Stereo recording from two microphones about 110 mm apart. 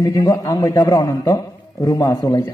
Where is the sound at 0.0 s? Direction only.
35° left (ahead or behind).